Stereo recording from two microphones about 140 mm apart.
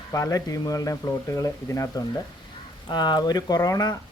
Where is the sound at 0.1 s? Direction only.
25° left (ahead or behind).